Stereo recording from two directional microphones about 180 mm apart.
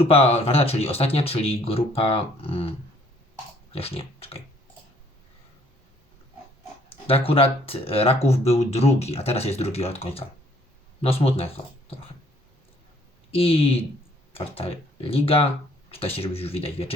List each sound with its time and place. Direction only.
0.0 s speech: 35° left (ahead or behind)
3.7 s pig: 30° left (ahead or behind)
6.9 s speech: 30° left (ahead or behind)
13.3 s speech: 30° left (ahead or behind)